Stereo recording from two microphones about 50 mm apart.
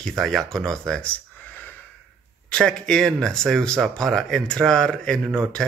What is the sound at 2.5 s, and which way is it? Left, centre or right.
Speech, centre.